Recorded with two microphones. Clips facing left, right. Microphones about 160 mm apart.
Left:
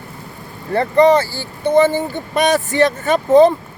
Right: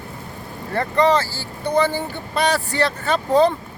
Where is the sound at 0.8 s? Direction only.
15° left (ahead or behind).